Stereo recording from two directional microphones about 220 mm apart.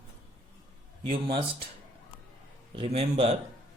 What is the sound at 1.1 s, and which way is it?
Speech, 25° right (ahead or behind).